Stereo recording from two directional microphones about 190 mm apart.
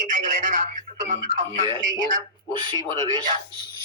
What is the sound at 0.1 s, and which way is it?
Speech, 40° right (ahead or behind).